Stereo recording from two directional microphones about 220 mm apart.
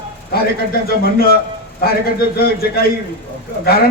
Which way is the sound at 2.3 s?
45° left (ahead or behind).